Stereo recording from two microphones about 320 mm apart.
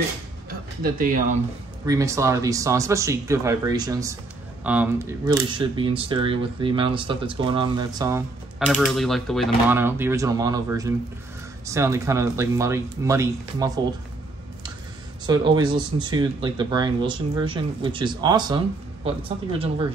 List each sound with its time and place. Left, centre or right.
0.5 s music: right
1.9 s speech: centre
15.2 s speech: centre